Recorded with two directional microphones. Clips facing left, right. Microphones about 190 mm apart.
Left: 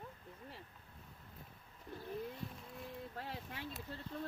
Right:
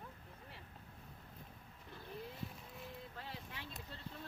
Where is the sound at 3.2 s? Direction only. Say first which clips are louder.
Left 4 dB; 50° left (ahead or behind).